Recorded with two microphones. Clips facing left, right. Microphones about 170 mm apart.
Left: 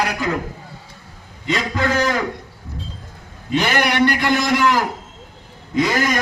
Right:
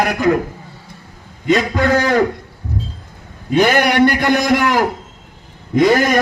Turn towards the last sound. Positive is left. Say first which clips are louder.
# right 6 dB
turn(degrees=-50)  # may be behind; listen again after turning